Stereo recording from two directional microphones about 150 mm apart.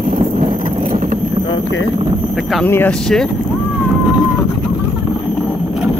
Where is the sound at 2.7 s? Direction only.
15° left (ahead or behind).